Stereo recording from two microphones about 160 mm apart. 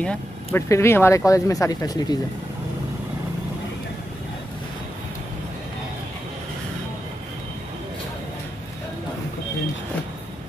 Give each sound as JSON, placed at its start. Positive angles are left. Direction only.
{"t": 0.0, "sound": "speech", "side_deg": 10}